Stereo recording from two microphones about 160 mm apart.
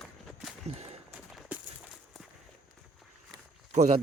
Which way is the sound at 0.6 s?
40° right (ahead or behind).